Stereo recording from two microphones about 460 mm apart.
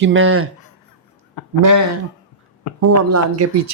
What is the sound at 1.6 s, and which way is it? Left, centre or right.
Speech, right.